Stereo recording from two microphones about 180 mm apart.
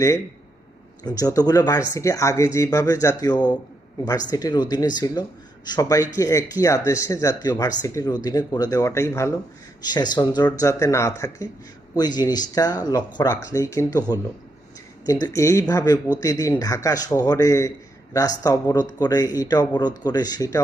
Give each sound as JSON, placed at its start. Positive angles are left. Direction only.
{"t": 1.0, "sound": "speech", "side_deg": 20}
{"t": 15.0, "sound": "speech", "side_deg": 20}